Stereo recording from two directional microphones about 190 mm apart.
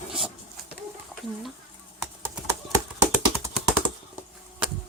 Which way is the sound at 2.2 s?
20° right (ahead or behind).